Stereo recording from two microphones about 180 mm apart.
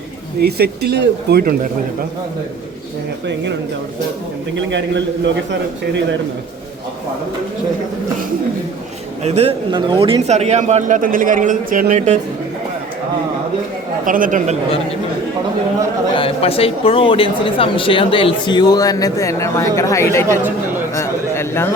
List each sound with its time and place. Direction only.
0.4 s speech: 65° right (ahead or behind)
4.5 s a man's voice: 85° right
9.2 s a man's voice: 35° right (ahead or behind)
14.0 s speech: 50° right (ahead or behind)
16.1 s speech: 30° left (ahead or behind); by 21.7 s 15° left (ahead or behind)